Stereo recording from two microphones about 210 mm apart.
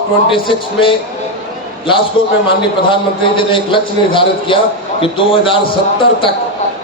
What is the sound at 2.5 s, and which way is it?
A man's voice, 25° left (ahead or behind).